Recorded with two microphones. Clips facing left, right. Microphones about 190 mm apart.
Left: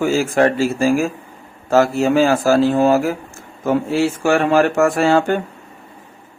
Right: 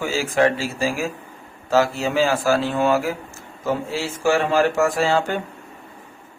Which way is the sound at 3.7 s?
55° left (ahead or behind).